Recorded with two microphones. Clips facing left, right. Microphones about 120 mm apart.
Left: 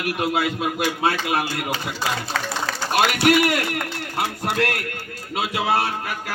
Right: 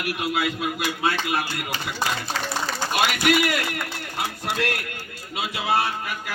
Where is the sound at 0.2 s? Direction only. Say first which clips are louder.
Left 3 dB; 50° left (ahead or behind).